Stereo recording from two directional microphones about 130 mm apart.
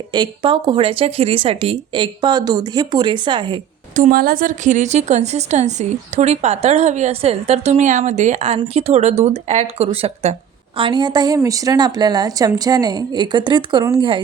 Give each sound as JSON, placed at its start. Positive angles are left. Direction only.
{"t": 0.1, "sound": "speech", "side_deg": -35}
{"t": 3.9, "sound": "a woman's voice", "side_deg": -80}
{"t": 10.8, "sound": "speech", "side_deg": -35}